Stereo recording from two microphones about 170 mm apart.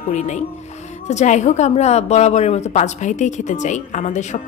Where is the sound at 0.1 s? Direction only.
45° left (ahead or behind).